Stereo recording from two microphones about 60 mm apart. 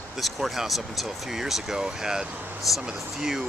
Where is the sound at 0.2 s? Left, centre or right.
Centre.